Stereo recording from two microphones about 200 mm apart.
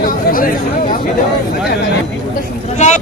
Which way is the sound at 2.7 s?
35° left (ahead or behind).